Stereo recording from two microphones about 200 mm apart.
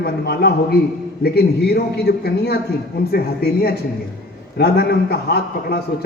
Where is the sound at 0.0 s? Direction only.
55° left (ahead or behind).